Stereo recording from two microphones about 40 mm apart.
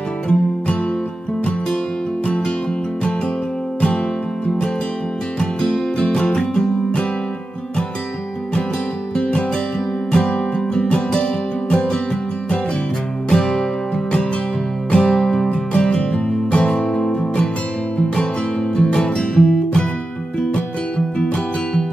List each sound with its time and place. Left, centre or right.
2.2 s music: left
5.4 s music: centre
9.1 s music: left
13.3 s music: centre
14.9 s music: left
15.5 s music: left
18.8 s music: left